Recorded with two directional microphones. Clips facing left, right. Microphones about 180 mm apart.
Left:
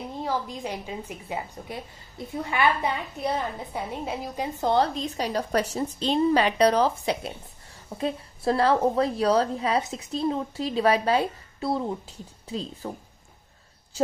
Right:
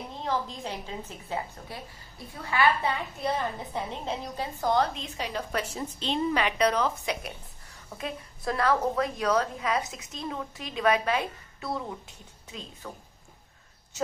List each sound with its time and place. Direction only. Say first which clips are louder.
0.2 s a woman's voice: left 1 dB; 10° left (ahead or behind)
4.6 s a woman's voice: left 3 dB; 30° left (ahead or behind)
13.9 s a woman's voice: left 5 dB; 30° left (ahead or behind)